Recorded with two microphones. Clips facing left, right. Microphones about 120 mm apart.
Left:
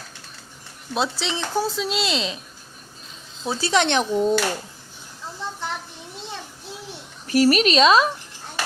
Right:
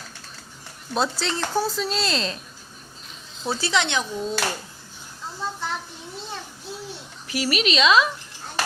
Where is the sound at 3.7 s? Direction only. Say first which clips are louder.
Left 7 dB; 60° left (ahead or behind).